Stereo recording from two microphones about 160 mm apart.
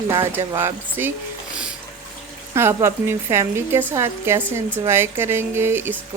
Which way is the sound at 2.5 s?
15° right (ahead or behind).